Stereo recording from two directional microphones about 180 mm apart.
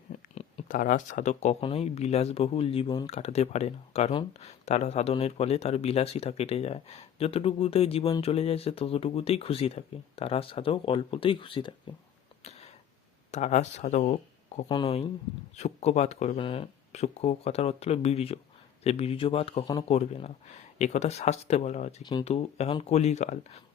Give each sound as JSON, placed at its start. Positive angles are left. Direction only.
{"t": 0.3, "sound": "speech", "side_deg": 40}
{"t": 12.4, "sound": "a sound", "side_deg": 35}
{"t": 13.3, "sound": "speech", "side_deg": 40}
{"t": 14.7, "sound": "speech", "side_deg": 30}